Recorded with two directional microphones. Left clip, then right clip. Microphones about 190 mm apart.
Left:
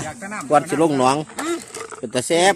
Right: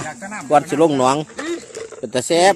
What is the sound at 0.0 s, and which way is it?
Speech, centre (ahead or behind).